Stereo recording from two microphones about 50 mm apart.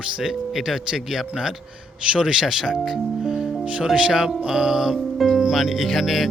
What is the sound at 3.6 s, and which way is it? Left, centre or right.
Speech, right.